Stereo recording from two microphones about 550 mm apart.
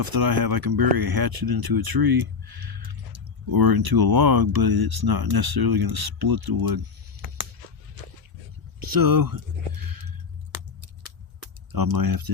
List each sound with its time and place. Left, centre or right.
0.0 s speech: right
8.8 s a sound: right
11.7 s speech: right